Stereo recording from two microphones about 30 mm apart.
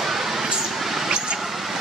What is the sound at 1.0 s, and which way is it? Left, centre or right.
Vehicle, right.